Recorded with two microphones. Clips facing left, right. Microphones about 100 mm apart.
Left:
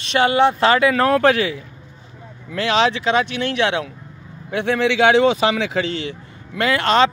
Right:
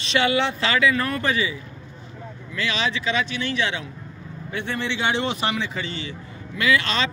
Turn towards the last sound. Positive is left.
turn(degrees=55)  # may be behind; listen again after turning